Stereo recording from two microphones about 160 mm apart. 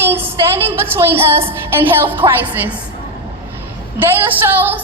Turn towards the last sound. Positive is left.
turn(degrees=-15)  # may be behind; listen again after turning